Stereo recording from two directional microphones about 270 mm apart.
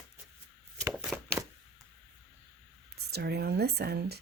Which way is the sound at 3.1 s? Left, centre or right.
Right.